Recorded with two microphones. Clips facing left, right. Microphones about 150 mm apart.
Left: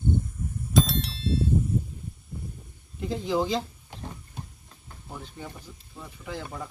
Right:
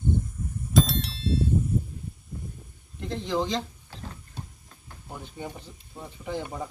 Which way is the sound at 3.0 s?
5° left (ahead or behind).